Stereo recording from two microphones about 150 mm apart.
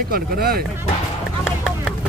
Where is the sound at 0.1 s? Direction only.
90° right.